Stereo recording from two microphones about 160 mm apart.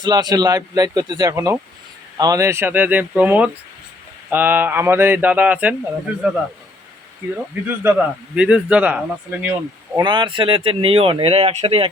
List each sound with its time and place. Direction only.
0.0 s a man's voice: 25° right (ahead or behind); by 6.3 s 10° right (ahead or behind)
7.9 s speech: 5° right (ahead or behind)
10.0 s speech: 30° right (ahead or behind)